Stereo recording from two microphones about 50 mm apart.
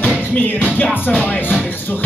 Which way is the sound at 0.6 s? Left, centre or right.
Left.